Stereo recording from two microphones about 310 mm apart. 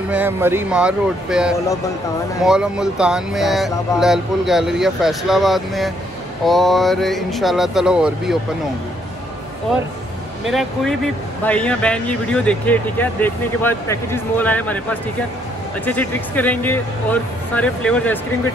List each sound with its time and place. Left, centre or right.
0.1 s speech: centre
10.5 s speech: centre